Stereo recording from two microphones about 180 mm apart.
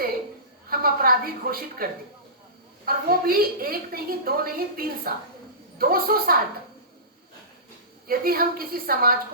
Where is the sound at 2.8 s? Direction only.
55° right (ahead or behind).